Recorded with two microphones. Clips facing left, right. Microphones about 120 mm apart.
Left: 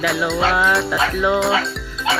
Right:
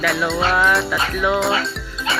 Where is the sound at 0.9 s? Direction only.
20° left (ahead or behind).